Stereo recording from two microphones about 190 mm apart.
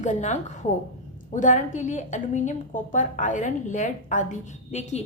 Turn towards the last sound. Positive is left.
turn(degrees=40)  # may be behind; listen again after turning